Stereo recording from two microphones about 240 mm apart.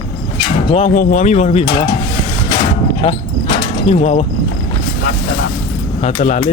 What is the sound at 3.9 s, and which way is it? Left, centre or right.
Speech, left.